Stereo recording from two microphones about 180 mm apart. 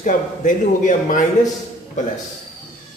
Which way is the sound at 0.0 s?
45° left (ahead or behind).